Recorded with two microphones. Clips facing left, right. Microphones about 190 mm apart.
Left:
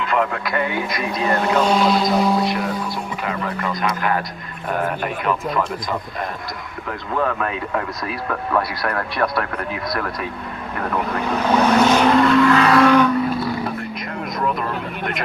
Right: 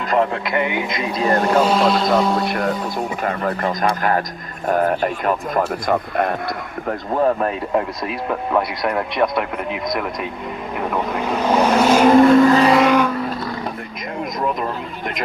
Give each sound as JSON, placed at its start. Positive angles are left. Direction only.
{"t": 0.0, "sound": "radio", "side_deg": -40}
{"t": 0.4, "sound": "speech", "side_deg": -20}
{"t": 1.2, "sound": "speech", "side_deg": -35}
{"t": 1.6, "sound": "music", "side_deg": 0}
{"t": 3.2, "sound": "a man's voice", "side_deg": -45}
{"t": 6.8, "sound": "speech", "side_deg": -35}
{"t": 10.8, "sound": "speech", "side_deg": -10}
{"t": 12.1, "sound": "vehicle", "side_deg": -45}
{"t": 12.7, "sound": "speech", "side_deg": -10}